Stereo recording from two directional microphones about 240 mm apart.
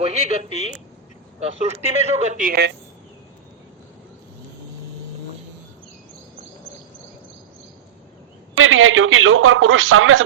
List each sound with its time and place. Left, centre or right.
0.0 s speech: right
0.4 s a woman's voice: left
1.4 s speech: right
8.5 s a man's voice: right